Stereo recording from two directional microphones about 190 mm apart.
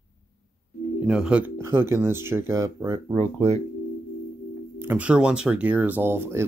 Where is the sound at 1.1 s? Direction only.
5° right (ahead or behind).